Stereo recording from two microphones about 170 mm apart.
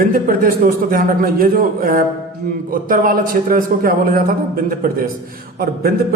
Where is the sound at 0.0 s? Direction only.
55° right (ahead or behind).